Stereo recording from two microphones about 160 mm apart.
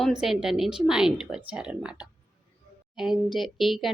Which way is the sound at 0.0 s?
5° right (ahead or behind).